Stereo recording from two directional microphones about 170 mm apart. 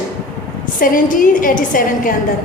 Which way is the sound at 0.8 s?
50° left (ahead or behind).